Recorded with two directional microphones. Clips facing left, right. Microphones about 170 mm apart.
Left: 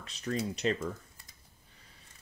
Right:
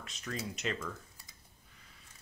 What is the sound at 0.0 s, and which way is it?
Speech, 35° left (ahead or behind).